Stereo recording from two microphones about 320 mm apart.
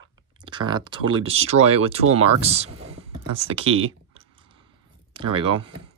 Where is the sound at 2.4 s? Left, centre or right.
Centre.